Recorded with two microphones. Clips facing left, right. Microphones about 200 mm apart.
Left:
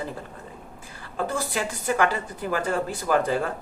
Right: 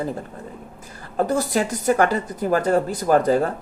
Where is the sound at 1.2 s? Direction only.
40° right (ahead or behind).